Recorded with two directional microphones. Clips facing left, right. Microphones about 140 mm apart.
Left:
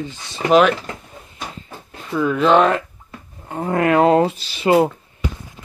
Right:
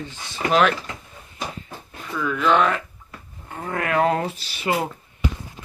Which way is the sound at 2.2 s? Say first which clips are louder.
Left 5 dB; 30° left (ahead or behind).